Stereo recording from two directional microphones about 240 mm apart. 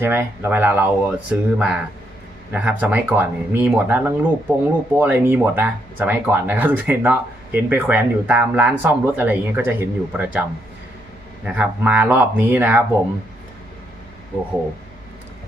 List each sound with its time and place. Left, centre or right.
0.0 s speech: centre
11.4 s speech: centre